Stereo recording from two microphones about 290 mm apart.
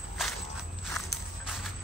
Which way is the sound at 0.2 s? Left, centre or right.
Centre.